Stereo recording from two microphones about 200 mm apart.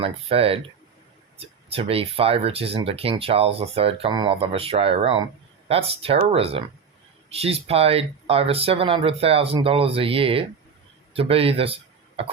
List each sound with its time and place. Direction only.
0.0 s a man's voice: 30° right (ahead or behind)